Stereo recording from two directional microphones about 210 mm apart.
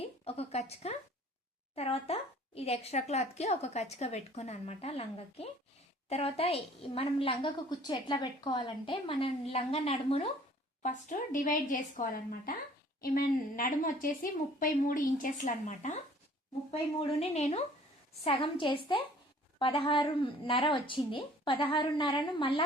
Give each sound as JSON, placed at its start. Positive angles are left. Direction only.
{"t": 0.0, "sound": "a woman's voice", "side_deg": 30}
{"t": 17.0, "sound": "a woman's voice", "side_deg": 30}